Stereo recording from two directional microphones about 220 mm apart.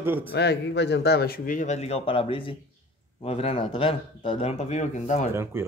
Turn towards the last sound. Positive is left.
turn(degrees=-10)  # may be behind; listen again after turning